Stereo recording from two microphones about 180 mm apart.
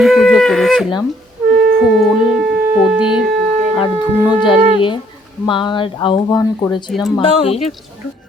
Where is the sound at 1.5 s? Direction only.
60° right (ahead or behind).